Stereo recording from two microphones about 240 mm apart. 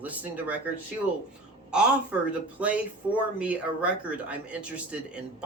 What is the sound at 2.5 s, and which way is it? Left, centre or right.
A man's voice, centre.